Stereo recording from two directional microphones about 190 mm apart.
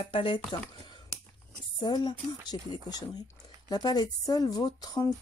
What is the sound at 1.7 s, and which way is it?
Speech, 25° left (ahead or behind).